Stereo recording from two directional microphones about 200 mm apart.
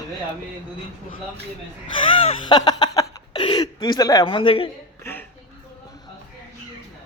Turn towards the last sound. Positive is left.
turn(degrees=10)  # may be behind; listen again after turning